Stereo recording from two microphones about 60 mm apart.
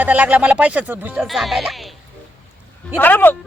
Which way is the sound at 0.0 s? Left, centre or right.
Right.